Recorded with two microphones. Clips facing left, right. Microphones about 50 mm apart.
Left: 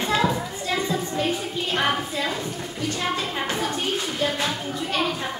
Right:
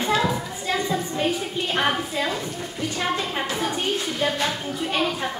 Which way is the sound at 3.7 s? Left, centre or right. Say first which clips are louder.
Right 1 dB; centre.